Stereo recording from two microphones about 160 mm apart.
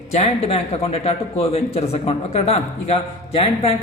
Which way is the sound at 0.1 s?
40° left (ahead or behind).